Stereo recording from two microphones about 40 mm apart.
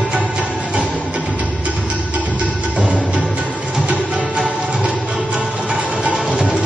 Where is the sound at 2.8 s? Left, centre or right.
Right.